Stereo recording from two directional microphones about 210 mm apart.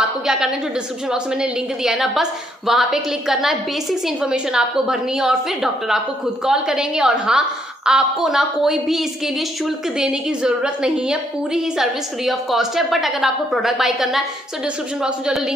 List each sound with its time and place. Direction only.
0.3 s a woman's voice: 5° right (ahead or behind)